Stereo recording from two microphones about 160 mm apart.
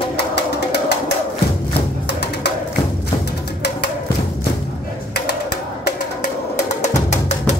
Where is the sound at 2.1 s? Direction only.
90° left.